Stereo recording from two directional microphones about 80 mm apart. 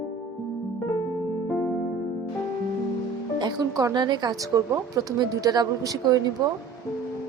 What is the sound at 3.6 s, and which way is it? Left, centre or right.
A woman's voice, right.